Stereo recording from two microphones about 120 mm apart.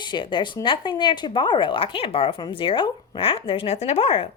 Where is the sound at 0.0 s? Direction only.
40° left (ahead or behind).